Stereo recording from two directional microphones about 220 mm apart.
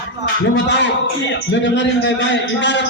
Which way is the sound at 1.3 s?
55° left (ahead or behind).